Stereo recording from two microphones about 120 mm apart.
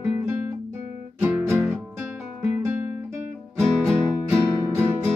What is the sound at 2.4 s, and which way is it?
Guitar, 20° right (ahead or behind).